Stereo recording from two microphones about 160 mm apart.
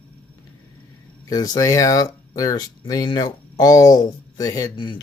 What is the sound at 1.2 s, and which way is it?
Speech, 25° left (ahead or behind).